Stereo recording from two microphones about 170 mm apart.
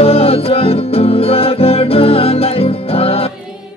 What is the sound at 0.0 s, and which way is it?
Music, 35° left (ahead or behind).